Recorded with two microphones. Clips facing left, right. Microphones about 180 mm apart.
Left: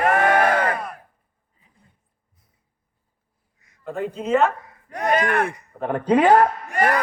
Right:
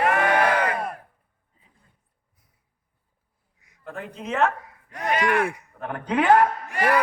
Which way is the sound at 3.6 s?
15° right (ahead or behind).